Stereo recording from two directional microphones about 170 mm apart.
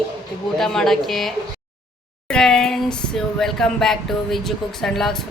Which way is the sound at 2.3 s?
5° left (ahead or behind).